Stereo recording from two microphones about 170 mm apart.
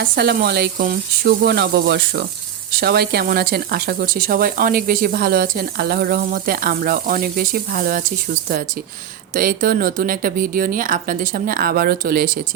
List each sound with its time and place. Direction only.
0.2 s speech: 75° right (ahead or behind); by 12.4 s 55° right (ahead or behind)